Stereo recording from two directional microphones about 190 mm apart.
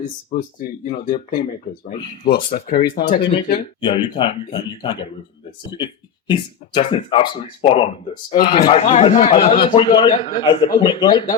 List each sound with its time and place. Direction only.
0.0 s speech: 40° left (ahead or behind)
2.6 s speech: 55° left (ahead or behind)
3.2 s a man's voice: 25° left (ahead or behind)